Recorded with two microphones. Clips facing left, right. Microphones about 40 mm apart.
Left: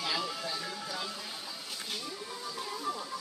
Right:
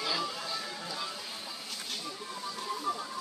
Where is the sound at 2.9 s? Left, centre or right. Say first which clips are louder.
Right 2 dB; centre.